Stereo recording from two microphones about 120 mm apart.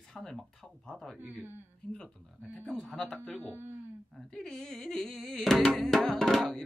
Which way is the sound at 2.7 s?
5° left (ahead or behind).